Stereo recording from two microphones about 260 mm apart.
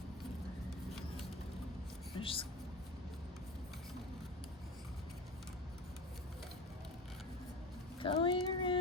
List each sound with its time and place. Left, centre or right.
2.2 s speech: centre
7.9 s child singing: centre